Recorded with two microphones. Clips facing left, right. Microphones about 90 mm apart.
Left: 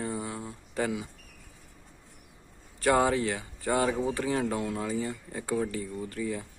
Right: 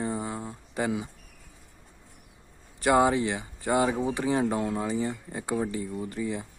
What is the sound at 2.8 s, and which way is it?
Speech, 15° right (ahead or behind).